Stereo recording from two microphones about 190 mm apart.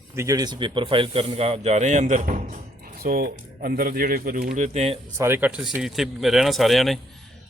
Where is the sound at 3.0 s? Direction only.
50° right (ahead or behind).